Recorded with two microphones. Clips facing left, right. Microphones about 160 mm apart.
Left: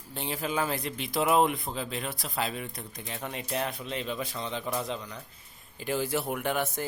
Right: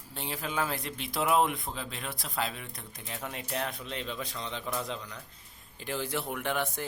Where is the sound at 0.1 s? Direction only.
Centre (ahead or behind).